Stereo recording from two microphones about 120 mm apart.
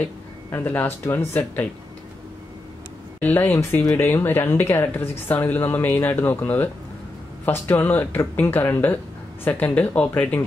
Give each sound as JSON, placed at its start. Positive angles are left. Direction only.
{"t": 0.0, "sound": "speech", "side_deg": 15}
{"t": 3.2, "sound": "speech", "side_deg": 15}